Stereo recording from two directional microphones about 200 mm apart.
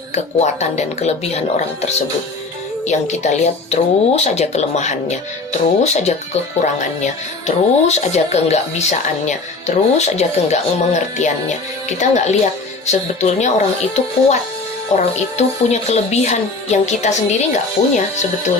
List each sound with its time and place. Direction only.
0.1 s speech: 35° left (ahead or behind)
13.4 s speech: 35° left (ahead or behind)